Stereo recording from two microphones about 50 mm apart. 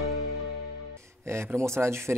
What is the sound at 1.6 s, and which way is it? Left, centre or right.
Speech, right.